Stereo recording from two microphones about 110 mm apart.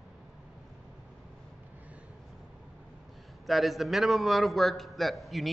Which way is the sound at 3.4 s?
Centre (ahead or behind).